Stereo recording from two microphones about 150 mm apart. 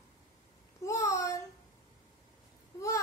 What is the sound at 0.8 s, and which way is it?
Speech, 20° left (ahead or behind).